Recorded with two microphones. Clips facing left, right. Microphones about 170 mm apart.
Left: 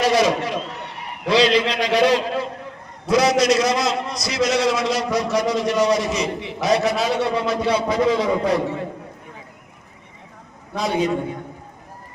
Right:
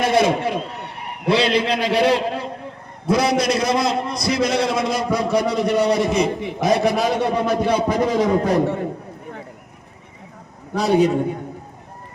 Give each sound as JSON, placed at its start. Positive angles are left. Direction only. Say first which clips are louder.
{"t": 0.0, "sound": "a man's voice", "louder": "right 1 dB", "side_deg": -55}
{"t": 10.8, "sound": "a man's voice", "louder": "right 5 dB", "side_deg": -35}